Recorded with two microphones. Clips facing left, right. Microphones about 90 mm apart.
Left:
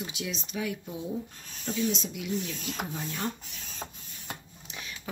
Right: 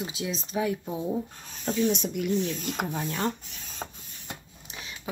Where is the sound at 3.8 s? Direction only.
35° right (ahead or behind).